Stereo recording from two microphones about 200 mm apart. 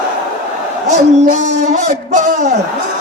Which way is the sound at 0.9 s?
35° right (ahead or behind).